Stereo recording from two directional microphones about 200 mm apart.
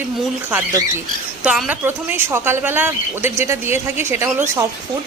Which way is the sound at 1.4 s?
5° right (ahead or behind).